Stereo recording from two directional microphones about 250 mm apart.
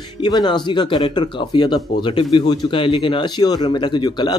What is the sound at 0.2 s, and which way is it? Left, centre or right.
Speech, centre.